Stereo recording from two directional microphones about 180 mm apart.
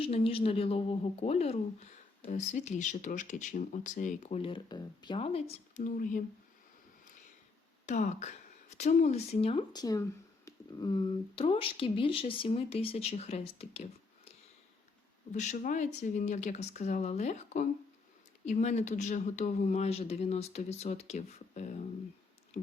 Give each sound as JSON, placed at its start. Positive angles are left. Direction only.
{"t": 0.0, "sound": "a woman's voice", "side_deg": 30}
{"t": 7.9, "sound": "a woman's voice", "side_deg": 40}
{"t": 15.3, "sound": "a woman's voice", "side_deg": 40}